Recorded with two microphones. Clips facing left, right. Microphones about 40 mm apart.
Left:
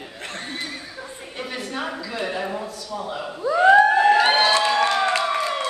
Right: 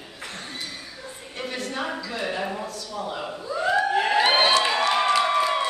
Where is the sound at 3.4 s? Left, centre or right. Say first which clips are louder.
Left 11 dB; left.